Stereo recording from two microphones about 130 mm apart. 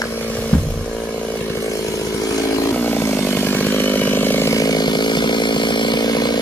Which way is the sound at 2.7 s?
15° left (ahead or behind).